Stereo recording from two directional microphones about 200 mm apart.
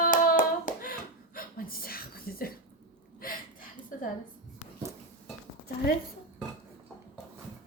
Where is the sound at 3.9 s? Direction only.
45° left (ahead or behind).